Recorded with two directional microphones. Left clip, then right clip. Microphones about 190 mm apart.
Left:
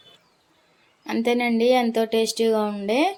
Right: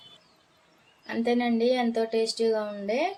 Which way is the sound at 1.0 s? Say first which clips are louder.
Left 4 dB; 45° left (ahead or behind).